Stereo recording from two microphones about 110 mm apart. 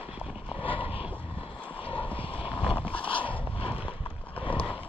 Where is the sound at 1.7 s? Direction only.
50° left (ahead or behind).